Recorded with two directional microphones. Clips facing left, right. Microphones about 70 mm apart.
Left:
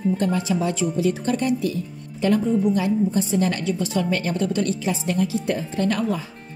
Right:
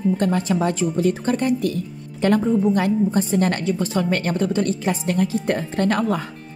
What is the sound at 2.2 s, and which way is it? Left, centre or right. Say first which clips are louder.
A woman's voice: right 2 dB; right.